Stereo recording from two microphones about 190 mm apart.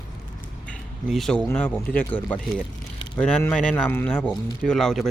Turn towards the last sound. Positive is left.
turn(degrees=0)  # may be behind; listen again after turning